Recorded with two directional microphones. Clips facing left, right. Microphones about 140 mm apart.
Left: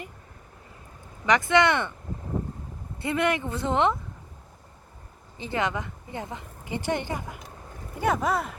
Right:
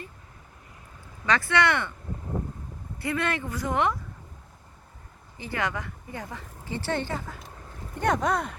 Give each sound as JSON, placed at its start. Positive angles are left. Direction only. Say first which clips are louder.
{"t": 1.2, "sound": "speech", "louder": "left 3 dB", "side_deg": 20}
{"t": 3.0, "sound": "speech", "louder": "left 3 dB", "side_deg": 20}
{"t": 5.4, "sound": "speech", "louder": "left 3 dB", "side_deg": 20}
{"t": 7.9, "sound": "speech", "louder": "even", "side_deg": 5}